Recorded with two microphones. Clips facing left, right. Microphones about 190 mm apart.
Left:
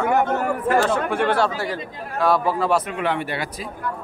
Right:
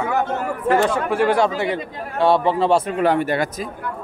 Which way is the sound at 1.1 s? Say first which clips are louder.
Right 3 dB; 5° right (ahead or behind).